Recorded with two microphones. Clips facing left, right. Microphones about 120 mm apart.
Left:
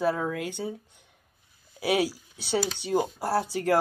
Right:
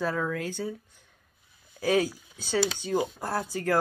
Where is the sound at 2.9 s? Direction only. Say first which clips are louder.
Left 7 dB; 30° left (ahead or behind).